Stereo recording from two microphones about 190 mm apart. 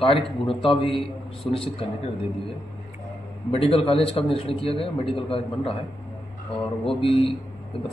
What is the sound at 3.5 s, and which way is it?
A man's voice, 30° left (ahead or behind).